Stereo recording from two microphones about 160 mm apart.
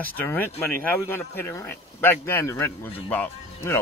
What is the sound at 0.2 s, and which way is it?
Speech, 10° left (ahead or behind).